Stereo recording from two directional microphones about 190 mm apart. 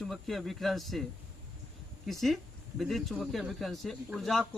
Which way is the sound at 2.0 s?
Centre (ahead or behind).